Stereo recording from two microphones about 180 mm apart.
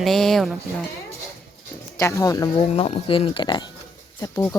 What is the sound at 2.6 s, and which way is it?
Speech, 30° left (ahead or behind).